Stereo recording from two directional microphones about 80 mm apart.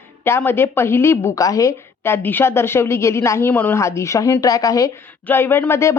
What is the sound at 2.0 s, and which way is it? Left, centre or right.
A woman's voice, left.